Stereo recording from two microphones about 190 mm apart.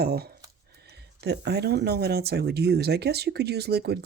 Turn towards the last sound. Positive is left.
turn(degrees=-60)  # may be behind; listen again after turning